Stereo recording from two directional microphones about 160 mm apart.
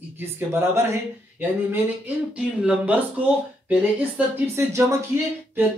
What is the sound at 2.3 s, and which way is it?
Speech, 5° right (ahead or behind).